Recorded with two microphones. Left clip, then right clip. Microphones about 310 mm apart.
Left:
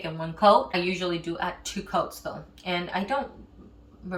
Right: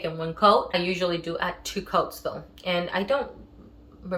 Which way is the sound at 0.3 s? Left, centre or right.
Centre.